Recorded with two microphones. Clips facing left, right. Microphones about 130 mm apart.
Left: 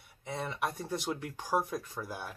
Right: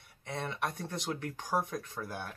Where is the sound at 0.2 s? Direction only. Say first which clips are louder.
Left 1 dB; 5° left (ahead or behind).